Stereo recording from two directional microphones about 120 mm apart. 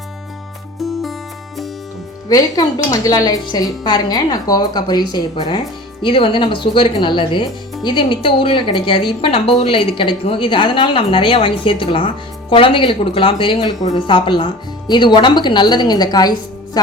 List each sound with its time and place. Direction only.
0.8 s music: centre (ahead or behind)
2.3 s a woman's voice: 30° left (ahead or behind)